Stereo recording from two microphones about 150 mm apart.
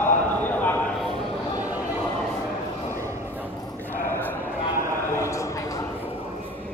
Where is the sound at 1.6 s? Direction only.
10° right (ahead or behind).